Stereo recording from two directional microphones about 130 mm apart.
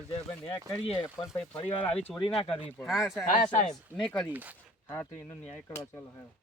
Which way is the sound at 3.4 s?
60° left (ahead or behind).